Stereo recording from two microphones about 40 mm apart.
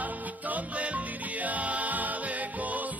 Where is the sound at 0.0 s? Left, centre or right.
Right.